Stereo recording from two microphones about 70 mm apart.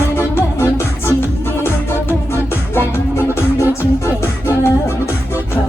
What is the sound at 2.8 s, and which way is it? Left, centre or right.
Music, left.